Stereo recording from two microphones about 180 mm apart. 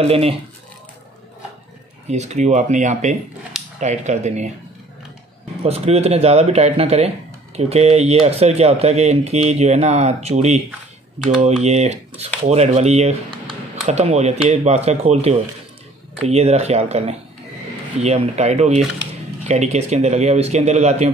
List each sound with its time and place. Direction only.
0.0 s speech: 35° right (ahead or behind)
2.0 s speech: 40° right (ahead or behind)
5.6 s speech: 35° right (ahead or behind)
11.6 s speech: 40° right (ahead or behind)